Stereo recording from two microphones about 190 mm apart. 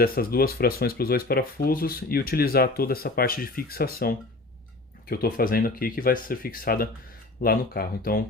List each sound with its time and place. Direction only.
0.0 s speech: 50° left (ahead or behind)